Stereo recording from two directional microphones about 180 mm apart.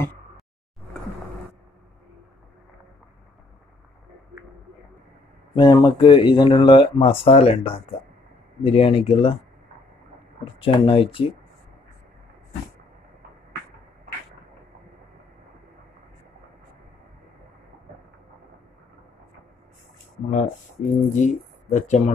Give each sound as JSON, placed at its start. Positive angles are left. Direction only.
{"t": 5.5, "sound": "speech", "side_deg": 25}
{"t": 10.4, "sound": "speech", "side_deg": 30}
{"t": 20.2, "sound": "speech", "side_deg": 40}